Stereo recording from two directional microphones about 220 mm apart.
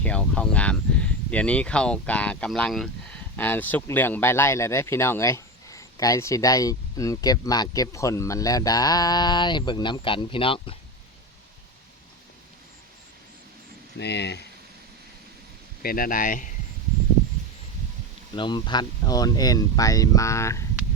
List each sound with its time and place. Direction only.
0.0 s speech: 5° left (ahead or behind); by 10.8 s 25° left (ahead or behind)
14.0 s speech: 50° left (ahead or behind)
15.8 s speech: 40° left (ahead or behind)
18.3 s speech: 20° left (ahead or behind)